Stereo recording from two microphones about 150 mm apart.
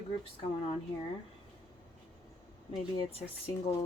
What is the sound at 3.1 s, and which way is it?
Speech, 40° left (ahead or behind).